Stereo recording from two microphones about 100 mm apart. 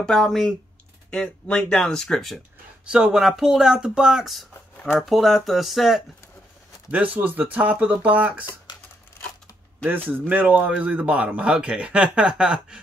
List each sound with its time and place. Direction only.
0.0 s speech: 5° left (ahead or behind)
2.8 s speech: 10° right (ahead or behind)
6.9 s speech: 15° right (ahead or behind)
8.7 s scissors: 45° left (ahead or behind)
10.0 s speech: 20° right (ahead or behind)